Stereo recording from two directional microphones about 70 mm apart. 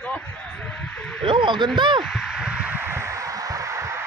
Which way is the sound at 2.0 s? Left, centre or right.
Centre.